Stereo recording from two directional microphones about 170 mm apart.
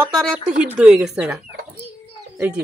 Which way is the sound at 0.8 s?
5° right (ahead or behind).